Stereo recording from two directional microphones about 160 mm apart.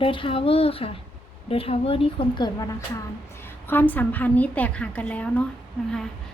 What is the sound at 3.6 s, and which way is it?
A woman's voice, 10° left (ahead or behind).